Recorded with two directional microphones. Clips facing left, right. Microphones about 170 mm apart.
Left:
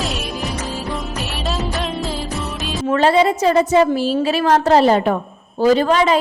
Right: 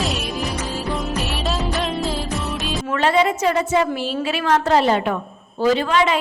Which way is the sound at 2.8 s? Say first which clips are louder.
Left 4 dB; 35° left (ahead or behind).